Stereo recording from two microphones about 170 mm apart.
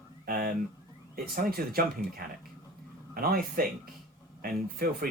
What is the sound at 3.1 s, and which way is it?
Speech, 60° right (ahead or behind).